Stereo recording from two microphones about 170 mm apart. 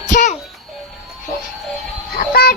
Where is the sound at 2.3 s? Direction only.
65° left (ahead or behind).